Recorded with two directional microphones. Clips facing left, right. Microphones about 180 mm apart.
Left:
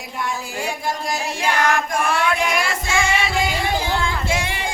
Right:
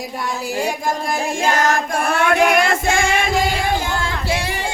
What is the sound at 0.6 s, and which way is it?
Music, 50° right (ahead or behind).